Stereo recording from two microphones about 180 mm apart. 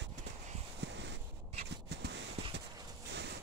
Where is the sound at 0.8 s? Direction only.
70° right (ahead or behind).